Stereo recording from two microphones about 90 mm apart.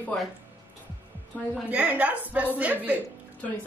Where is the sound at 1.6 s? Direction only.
15° right (ahead or behind).